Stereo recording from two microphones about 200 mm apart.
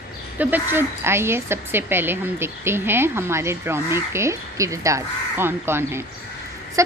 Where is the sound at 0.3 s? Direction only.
10° right (ahead or behind).